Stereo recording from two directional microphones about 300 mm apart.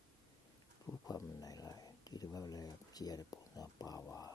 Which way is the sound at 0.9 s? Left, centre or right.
Centre.